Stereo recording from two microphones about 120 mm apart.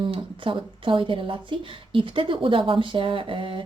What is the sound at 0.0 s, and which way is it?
Speech, 45° right (ahead or behind).